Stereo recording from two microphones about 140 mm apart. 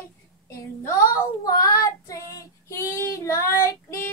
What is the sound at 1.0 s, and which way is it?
Child singing, 25° left (ahead or behind).